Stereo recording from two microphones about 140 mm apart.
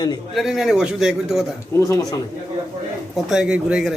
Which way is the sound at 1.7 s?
20° left (ahead or behind).